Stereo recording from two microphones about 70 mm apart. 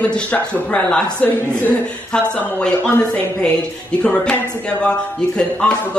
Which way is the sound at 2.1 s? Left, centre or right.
Centre.